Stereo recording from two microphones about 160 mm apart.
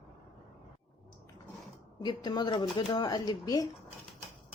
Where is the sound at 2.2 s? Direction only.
25° left (ahead or behind).